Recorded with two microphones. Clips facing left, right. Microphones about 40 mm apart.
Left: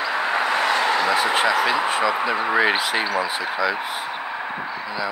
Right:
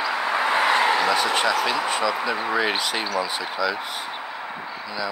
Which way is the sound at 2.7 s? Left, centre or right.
Centre.